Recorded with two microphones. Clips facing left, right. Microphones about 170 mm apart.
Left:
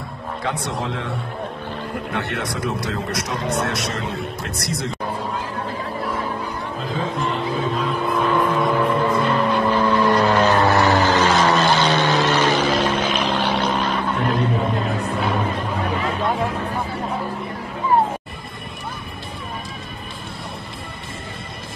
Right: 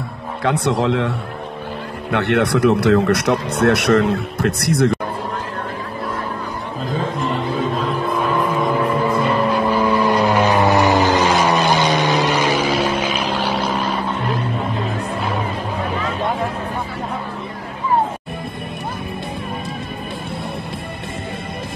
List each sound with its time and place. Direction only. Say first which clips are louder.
0.4 s speech: right 8 dB; 65° right (ahead or behind)
2.1 s speech: right 12 dB; 65° right (ahead or behind)
8.4 s vehicle: even; centre (ahead or behind)